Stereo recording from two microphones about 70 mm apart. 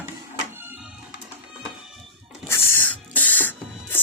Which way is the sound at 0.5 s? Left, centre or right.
Right.